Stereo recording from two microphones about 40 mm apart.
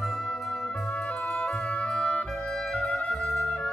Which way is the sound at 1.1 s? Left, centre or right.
Left.